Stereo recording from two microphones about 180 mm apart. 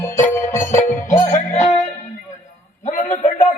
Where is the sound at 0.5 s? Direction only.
40° left (ahead or behind).